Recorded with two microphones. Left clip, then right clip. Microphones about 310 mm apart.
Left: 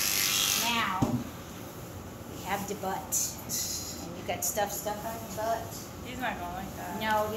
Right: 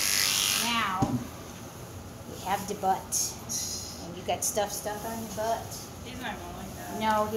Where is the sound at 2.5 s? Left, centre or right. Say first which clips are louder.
Right 3 dB; centre.